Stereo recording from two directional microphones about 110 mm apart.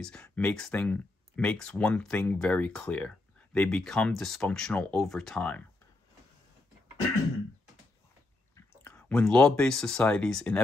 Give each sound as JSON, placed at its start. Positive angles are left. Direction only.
{"t": 0.0, "sound": "speech", "side_deg": 10}
{"t": 8.8, "sound": "speech", "side_deg": 10}